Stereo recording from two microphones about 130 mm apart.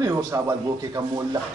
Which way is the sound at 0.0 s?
25° right (ahead or behind).